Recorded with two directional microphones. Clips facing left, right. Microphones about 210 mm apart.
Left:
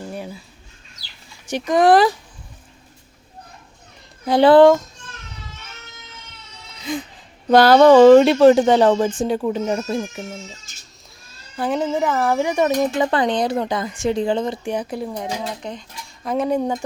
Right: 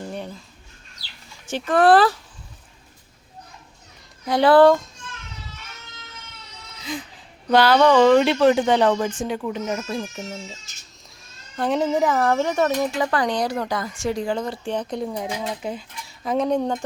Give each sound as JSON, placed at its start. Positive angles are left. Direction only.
{"t": 0.1, "sound": "a sound", "side_deg": 5}
{"t": 1.5, "sound": "speech", "side_deg": 15}
{"t": 4.3, "sound": "speech", "side_deg": 25}
{"t": 6.9, "sound": "speech", "side_deg": 55}
{"t": 11.5, "sound": "speech", "side_deg": 0}
{"t": 14.6, "sound": "speech", "side_deg": 10}